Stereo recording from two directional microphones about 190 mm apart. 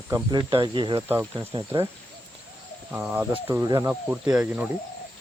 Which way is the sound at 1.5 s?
25° right (ahead or behind).